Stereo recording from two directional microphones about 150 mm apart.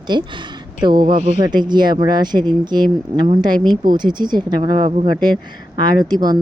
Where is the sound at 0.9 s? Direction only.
65° right (ahead or behind).